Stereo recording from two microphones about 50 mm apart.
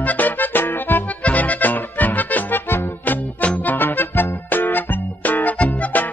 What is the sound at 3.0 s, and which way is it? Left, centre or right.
Music, left.